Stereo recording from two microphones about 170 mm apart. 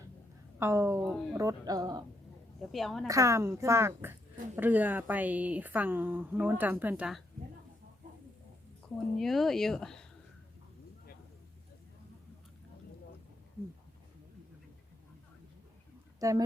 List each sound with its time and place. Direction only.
0.6 s speech: 15° right (ahead or behind)
1.0 s speech: 5° left (ahead or behind)
1.3 s speech: 20° right (ahead or behind)
2.6 s speech: centre (ahead or behind)
3.1 s speech: 20° right (ahead or behind)
9.1 s speech: centre (ahead or behind)
16.2 s speech: 20° right (ahead or behind)